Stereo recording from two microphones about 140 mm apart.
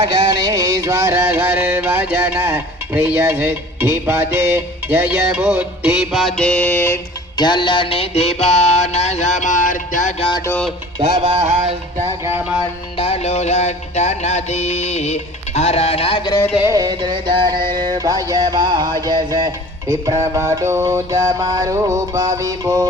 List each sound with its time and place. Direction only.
0.0 s music: 35° right (ahead or behind); by 7.0 s 15° left (ahead or behind)
7.3 s music: 35° left (ahead or behind); by 10.2 s 65° left (ahead or behind)
10.2 s music: 40° left (ahead or behind)
11.4 s music: 50° right (ahead or behind)
12.0 s music: 15° right (ahead or behind)
13.0 s music: 45° left (ahead or behind)
16.6 s music: 25° right (ahead or behind)